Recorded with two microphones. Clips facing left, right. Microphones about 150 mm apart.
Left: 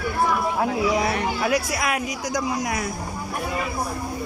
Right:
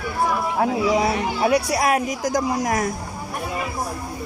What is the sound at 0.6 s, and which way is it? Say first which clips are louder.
Speech: right 5 dB; 25° right (ahead or behind).